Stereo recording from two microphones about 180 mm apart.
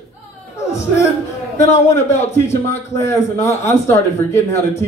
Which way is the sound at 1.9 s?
15° left (ahead or behind).